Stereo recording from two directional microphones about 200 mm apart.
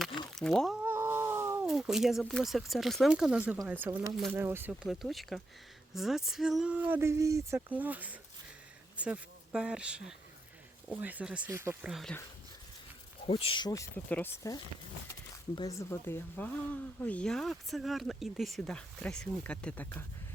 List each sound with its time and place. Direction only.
0.3 s a sound: centre (ahead or behind)
0.9 s cat: 10° right (ahead or behind)
1.6 s speech: centre (ahead or behind)
13.2 s speech: 30° left (ahead or behind); by 20.1 s 10° left (ahead or behind)